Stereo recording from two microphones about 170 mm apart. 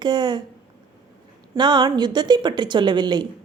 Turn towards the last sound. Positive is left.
turn(degrees=-25)  # may be behind; listen again after turning